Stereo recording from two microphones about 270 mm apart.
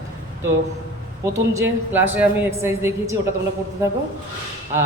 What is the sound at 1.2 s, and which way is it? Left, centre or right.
A man's voice, centre.